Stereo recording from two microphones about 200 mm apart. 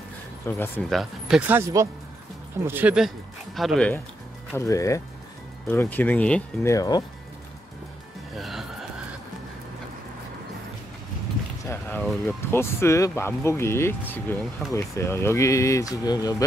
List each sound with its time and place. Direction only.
0.5 s speech: 10° left (ahead or behind)
2.6 s speech: 10° right (ahead or behind)
4.6 s speech: 15° left (ahead or behind)
6.7 s speech: 15° left (ahead or behind)
8.4 s music: centre (ahead or behind)
11.6 s speech: 10° left (ahead or behind)